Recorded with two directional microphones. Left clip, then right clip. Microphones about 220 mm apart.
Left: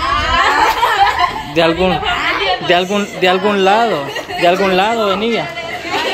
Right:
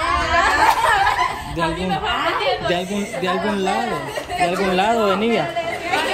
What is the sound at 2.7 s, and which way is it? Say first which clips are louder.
Speech: left 9 dB; centre (ahead or behind).